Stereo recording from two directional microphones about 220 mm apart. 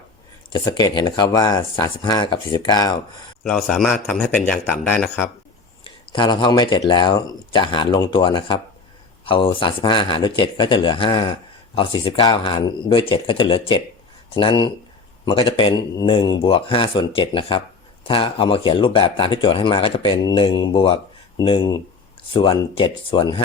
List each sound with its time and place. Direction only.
0.5 s speech: 20° left (ahead or behind)
3.4 s a man's voice: 5° left (ahead or behind)
5.8 s speech: 20° left (ahead or behind)